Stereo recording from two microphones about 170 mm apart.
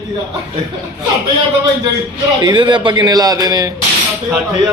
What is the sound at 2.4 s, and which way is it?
A man's voice, 25° right (ahead or behind).